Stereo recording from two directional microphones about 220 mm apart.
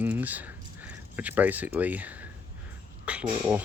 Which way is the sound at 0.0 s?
5° right (ahead or behind).